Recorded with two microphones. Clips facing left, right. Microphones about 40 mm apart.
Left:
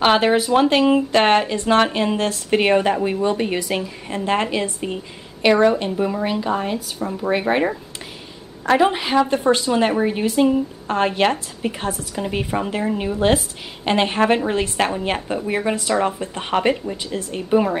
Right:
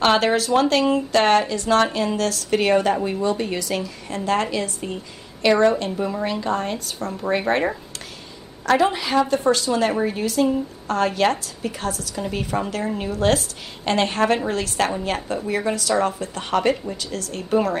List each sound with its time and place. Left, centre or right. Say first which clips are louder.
0.0 s speech: left 2 dB; centre
8.6 s speech: left 2 dB; left